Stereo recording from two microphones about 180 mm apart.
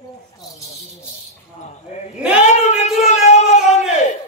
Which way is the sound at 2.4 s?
40° left (ahead or behind).